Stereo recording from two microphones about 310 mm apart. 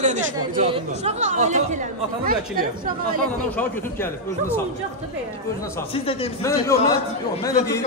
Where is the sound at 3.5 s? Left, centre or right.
Centre.